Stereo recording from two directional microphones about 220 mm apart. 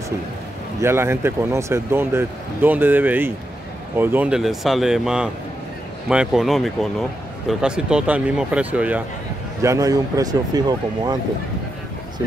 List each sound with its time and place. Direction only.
0.7 s speech: 10° right (ahead or behind)